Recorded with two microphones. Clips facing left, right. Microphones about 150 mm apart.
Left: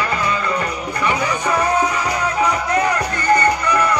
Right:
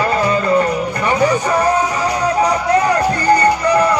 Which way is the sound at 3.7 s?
30° right (ahead or behind).